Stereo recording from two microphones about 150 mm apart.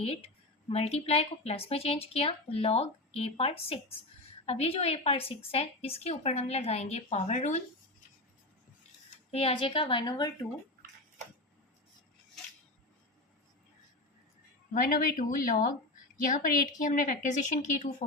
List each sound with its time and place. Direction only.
0.0 s a woman's voice: 40° left (ahead or behind)
9.3 s speech: 40° left (ahead or behind)
14.7 s a woman's voice: 65° left (ahead or behind)